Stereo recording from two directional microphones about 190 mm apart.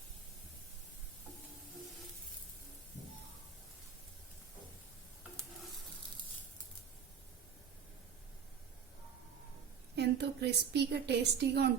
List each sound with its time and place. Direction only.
9.9 s a woman's voice: 60° right (ahead or behind)